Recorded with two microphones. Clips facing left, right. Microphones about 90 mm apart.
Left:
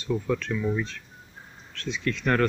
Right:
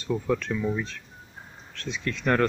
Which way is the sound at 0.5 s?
10° right (ahead or behind).